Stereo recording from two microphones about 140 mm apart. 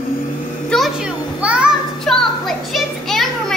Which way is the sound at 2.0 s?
5° left (ahead or behind).